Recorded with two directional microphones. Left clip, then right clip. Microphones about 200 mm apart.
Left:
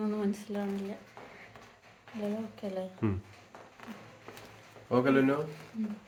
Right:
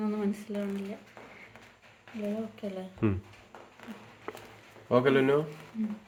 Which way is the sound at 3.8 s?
55° right (ahead or behind).